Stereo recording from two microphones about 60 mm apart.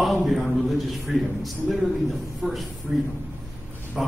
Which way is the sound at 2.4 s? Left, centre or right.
Right.